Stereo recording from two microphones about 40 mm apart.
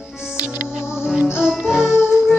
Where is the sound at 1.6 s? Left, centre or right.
Centre.